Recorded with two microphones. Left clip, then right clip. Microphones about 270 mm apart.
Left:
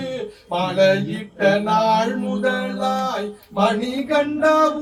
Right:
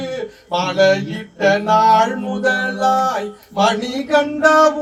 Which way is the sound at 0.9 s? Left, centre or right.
Centre.